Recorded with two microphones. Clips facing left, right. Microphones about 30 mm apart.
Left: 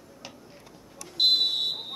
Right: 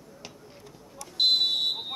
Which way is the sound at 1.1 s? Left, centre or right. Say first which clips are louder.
Even; centre.